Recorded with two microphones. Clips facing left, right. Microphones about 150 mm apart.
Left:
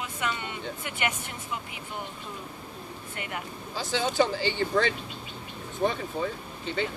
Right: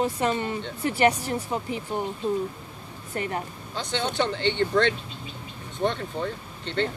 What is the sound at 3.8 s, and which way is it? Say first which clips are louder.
Speech: left 1 dB; 5° left (ahead or behind).